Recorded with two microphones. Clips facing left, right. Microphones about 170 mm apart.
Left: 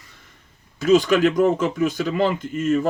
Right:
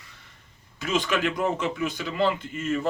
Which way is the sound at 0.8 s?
45° left (ahead or behind).